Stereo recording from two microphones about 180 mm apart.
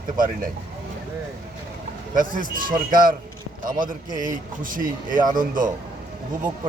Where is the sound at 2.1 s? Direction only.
50° right (ahead or behind).